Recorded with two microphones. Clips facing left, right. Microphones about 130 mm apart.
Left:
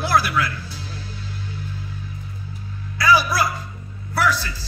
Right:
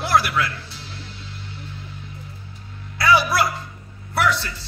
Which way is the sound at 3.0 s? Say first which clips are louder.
Even; 25° right (ahead or behind).